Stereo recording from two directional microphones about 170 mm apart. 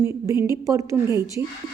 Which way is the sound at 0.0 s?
15° right (ahead or behind).